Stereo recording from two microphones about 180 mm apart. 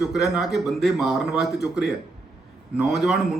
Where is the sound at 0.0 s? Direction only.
Centre (ahead or behind).